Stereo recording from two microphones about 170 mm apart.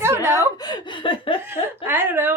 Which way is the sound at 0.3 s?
25° left (ahead or behind).